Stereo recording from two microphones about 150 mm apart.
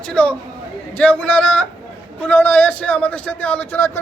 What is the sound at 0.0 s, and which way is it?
A man's voice, 10° left (ahead or behind).